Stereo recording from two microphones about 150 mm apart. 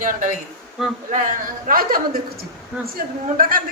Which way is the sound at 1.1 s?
65° right (ahead or behind).